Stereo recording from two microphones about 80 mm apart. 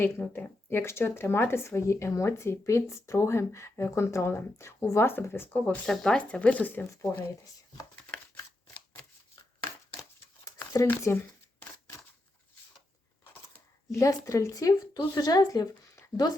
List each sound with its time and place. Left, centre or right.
0.0 s speech: left
5.5 s speech: centre
5.8 s speech: centre; by 6.8 s left
10.4 s a sound: left
10.8 s speech: left
13.9 s speech: left